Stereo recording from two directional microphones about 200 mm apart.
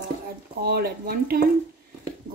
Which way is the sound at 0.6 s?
50° right (ahead or behind).